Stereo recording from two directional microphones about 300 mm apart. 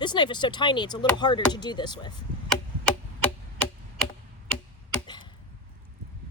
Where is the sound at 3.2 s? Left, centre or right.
Centre.